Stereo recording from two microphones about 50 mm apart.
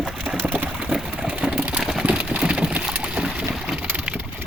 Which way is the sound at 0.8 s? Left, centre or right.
Centre.